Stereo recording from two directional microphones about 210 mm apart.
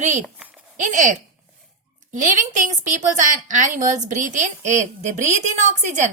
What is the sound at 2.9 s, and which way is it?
A woman's voice, 35° right (ahead or behind).